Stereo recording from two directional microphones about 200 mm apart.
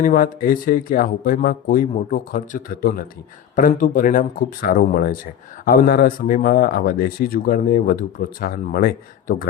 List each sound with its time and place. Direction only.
0.0 s speech: 45° left (ahead or behind)